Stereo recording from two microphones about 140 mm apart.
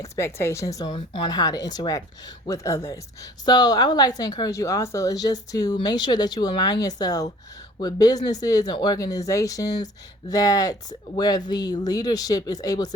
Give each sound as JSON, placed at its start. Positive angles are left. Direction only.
{"t": 0.0, "sound": "a woman's voice", "side_deg": 20}